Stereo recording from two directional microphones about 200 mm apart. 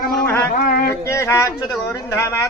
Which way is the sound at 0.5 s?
45° left (ahead or behind).